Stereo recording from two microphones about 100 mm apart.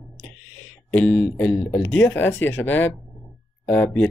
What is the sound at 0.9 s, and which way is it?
Speech, 15° left (ahead or behind).